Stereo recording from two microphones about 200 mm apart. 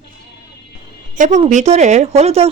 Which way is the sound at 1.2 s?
35° right (ahead or behind).